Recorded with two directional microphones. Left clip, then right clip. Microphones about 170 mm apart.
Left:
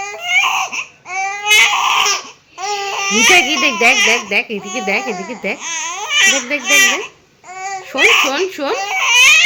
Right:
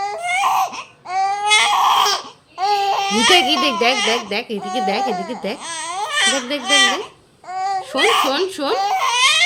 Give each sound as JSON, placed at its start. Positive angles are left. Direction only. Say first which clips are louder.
{"t": 0.0, "sound": "baby cry", "louder": "left 3 dB", "side_deg": -25}
{"t": 3.3, "sound": "a child's voice", "louder": "left 3 dB", "side_deg": 0}
{"t": 5.6, "sound": "speech", "louder": "left 3 dB", "side_deg": -25}
{"t": 7.9, "sound": "speech", "louder": "left 5 dB", "side_deg": -25}
{"t": 8.3, "sound": "a child's voice", "louder": "left 1 dB", "side_deg": 0}
{"t": 8.8, "sound": "baby cry", "louder": "left 6 dB", "side_deg": -20}